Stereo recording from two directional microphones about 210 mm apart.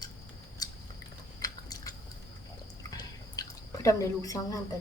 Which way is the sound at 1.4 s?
15° left (ahead or behind).